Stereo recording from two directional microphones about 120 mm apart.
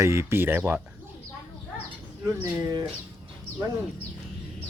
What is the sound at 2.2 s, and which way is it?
Speech, 25° right (ahead or behind).